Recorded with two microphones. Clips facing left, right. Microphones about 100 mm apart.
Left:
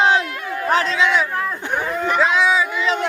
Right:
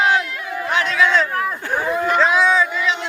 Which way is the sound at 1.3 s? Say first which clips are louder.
Right 1 dB; 5° right (ahead or behind).